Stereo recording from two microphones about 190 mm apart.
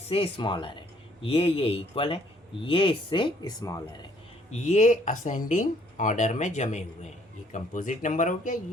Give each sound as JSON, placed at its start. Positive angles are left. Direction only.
{"t": 0.1, "sound": "speech", "side_deg": 30}
{"t": 4.5, "sound": "speech", "side_deg": 40}